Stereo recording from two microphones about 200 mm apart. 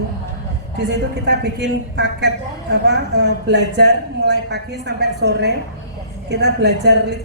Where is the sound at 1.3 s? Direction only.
60° right (ahead or behind).